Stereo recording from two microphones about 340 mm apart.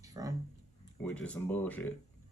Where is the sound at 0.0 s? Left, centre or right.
Centre.